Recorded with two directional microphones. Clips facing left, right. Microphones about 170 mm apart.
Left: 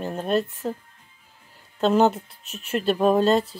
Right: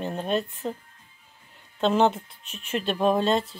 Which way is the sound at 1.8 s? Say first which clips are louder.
Left 2 dB; 5° left (ahead or behind).